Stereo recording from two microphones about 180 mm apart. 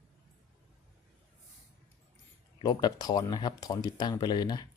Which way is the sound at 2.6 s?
20° left (ahead or behind).